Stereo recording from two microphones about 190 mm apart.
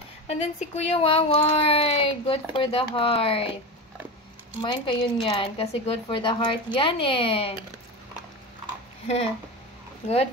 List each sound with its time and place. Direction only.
0.3 s speech: 35° left (ahead or behind)
4.6 s speech: 25° left (ahead or behind)
9.0 s speech: 35° left (ahead or behind)